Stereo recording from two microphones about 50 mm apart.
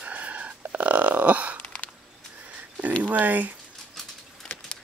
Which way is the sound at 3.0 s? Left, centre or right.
Right.